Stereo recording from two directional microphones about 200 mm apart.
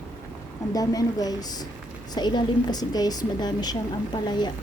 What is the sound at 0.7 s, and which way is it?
A woman's voice, 20° left (ahead or behind).